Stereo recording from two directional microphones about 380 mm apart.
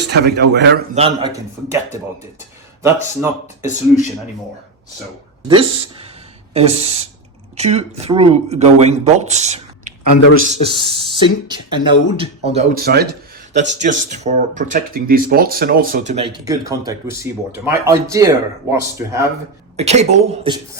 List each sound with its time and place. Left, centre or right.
0.0 s speech: right
0.9 s speech: centre
3.2 s speech: centre
5.5 s speech: centre